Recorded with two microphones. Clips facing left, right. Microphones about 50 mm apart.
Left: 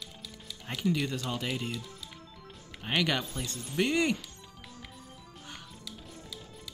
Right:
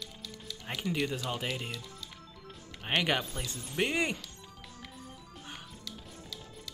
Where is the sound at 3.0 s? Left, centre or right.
Centre.